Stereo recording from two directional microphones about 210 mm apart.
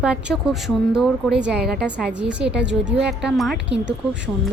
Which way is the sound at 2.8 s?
60° right (ahead or behind).